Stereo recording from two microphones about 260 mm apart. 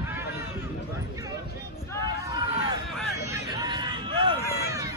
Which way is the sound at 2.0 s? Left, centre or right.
Centre.